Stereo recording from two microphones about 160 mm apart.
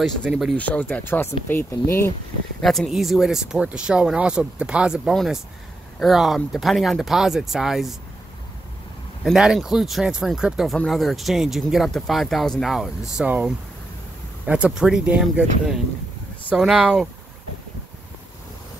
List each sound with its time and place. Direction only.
0.0 s speech: centre (ahead or behind)
0.6 s speech: 10° left (ahead or behind)
2.6 s speech: centre (ahead or behind)
9.2 s speech: 5° right (ahead or behind)